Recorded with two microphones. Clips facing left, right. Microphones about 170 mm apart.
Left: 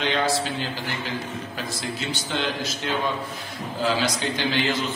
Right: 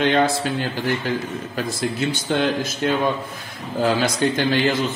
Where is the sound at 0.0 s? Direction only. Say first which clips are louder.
Right 5 dB; 55° right (ahead or behind).